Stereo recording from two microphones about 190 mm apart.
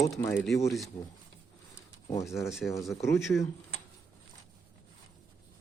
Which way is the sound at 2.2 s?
Centre (ahead or behind).